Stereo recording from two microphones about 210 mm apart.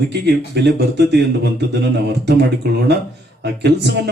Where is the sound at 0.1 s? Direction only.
55° right (ahead or behind).